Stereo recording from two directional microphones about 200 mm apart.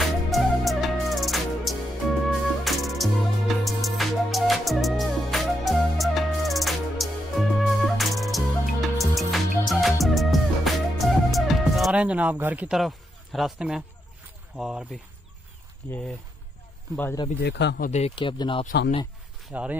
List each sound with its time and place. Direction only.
0.3 s music: centre (ahead or behind)
14.6 s speech: 5° right (ahead or behind)
16.9 s speech: 10° left (ahead or behind)
17.4 s speech: 60° left (ahead or behind)
17.8 s speech: 35° left (ahead or behind)
19.4 s speech: 5° right (ahead or behind)